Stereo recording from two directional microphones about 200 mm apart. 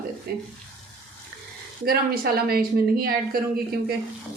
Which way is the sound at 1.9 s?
50° right (ahead or behind).